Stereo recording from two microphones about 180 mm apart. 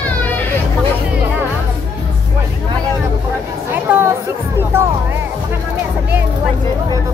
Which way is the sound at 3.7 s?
10° right (ahead or behind).